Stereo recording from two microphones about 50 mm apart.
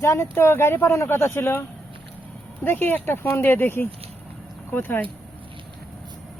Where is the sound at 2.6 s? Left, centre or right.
Left.